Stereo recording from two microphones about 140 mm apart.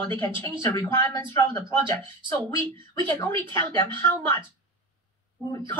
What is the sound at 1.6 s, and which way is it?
Speech, 35° right (ahead or behind).